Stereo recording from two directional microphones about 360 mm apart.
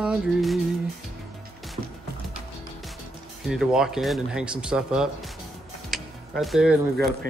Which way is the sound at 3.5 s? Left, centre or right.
Centre.